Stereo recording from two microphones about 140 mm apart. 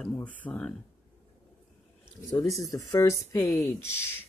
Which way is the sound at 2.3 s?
25° left (ahead or behind).